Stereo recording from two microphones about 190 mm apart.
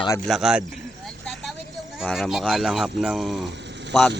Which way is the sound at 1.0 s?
Centre (ahead or behind).